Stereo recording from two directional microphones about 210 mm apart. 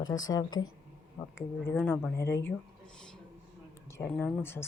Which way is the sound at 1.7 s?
5° left (ahead or behind).